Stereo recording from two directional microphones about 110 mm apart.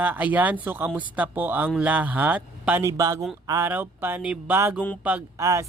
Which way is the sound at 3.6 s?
20° right (ahead or behind).